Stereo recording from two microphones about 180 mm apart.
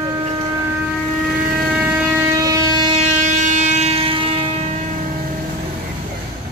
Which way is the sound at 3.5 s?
40° right (ahead or behind).